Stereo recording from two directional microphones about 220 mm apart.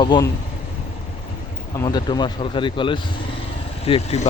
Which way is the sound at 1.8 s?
20° left (ahead or behind).